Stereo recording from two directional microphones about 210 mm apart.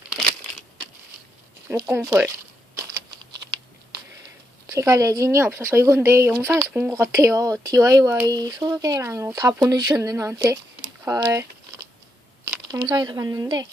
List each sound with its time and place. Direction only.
1.7 s speech: 15° right (ahead or behind)
4.6 s speech: 15° right (ahead or behind)
12.6 s speech: 20° right (ahead or behind)